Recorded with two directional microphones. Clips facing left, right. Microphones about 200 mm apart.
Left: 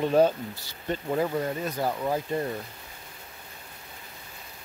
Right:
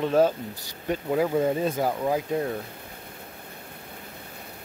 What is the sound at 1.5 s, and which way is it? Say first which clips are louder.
Speech: right 5 dB; 25° right (ahead or behind).